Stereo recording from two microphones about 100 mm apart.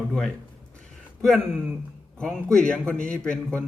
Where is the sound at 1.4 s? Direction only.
20° right (ahead or behind).